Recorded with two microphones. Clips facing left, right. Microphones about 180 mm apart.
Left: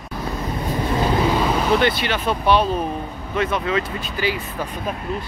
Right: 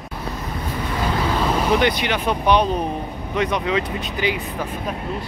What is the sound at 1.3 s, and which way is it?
Vehicle, 5° left (ahead or behind).